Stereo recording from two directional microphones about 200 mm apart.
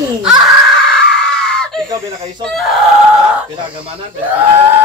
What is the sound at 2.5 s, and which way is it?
Speech, centre (ahead or behind).